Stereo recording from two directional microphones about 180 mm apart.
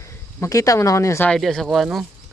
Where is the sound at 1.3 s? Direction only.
Centre (ahead or behind).